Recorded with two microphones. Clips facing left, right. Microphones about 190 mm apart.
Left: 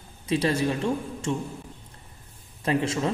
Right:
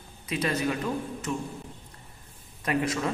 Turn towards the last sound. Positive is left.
turn(degrees=25)  # may be behind; listen again after turning